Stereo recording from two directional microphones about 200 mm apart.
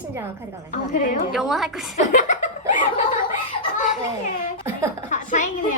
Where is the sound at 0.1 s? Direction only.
10° right (ahead or behind).